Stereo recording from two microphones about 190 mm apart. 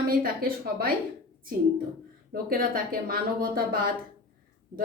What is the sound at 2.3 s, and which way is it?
A woman's voice, 50° right (ahead or behind).